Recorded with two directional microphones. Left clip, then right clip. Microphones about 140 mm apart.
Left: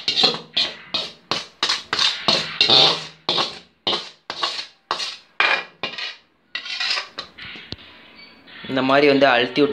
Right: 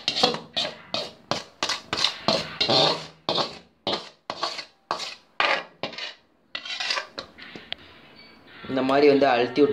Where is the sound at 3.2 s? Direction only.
15° right (ahead or behind).